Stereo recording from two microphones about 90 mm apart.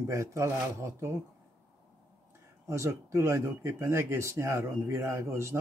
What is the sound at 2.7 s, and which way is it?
Speech, 35° right (ahead or behind).